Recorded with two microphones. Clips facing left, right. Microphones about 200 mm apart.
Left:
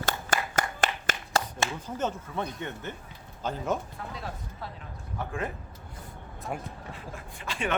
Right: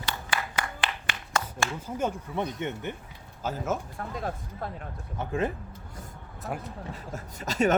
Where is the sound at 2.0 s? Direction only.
15° right (ahead or behind).